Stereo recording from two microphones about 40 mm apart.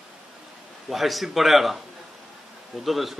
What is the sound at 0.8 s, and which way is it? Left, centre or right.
Speech, centre.